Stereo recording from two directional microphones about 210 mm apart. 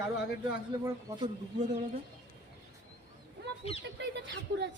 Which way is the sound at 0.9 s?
20° right (ahead or behind).